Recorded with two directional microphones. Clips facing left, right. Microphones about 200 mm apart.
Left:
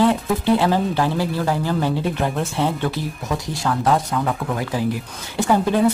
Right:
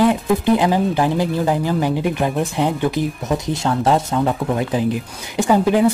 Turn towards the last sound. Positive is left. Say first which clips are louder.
# right 3 dB
turn(degrees=-15)  # may be behind; listen again after turning